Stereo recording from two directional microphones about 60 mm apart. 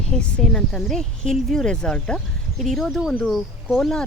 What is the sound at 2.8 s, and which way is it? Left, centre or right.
Speech, centre.